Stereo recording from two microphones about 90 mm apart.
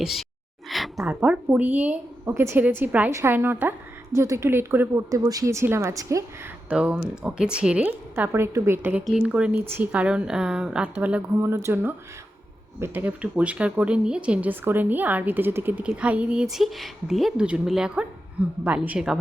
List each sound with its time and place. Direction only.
0.0 s speech: centre (ahead or behind)
0.7 s a sound: centre (ahead or behind)
1.2 s a woman's voice: 15° right (ahead or behind)
2.2 s speech: 30° right (ahead or behind)
2.6 s a woman's voice: 20° right (ahead or behind)
3.1 s a woman's voice: 35° right (ahead or behind)
3.3 s speech: 20° right (ahead or behind)
5.1 s a woman's voice: 40° right (ahead or behind)
6.7 s a woman's voice: 10° right (ahead or behind); by 8.9 s 30° right (ahead or behind)
9.2 s a woman's voice: 15° right (ahead or behind)
11.3 s speech: 30° right (ahead or behind)
15.8 s speech: 10° right (ahead or behind)
17.3 s a woman's voice: 15° right (ahead or behind)